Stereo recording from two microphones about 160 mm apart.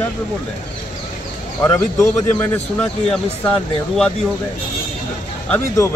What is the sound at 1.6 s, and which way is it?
Speech, 15° left (ahead or behind).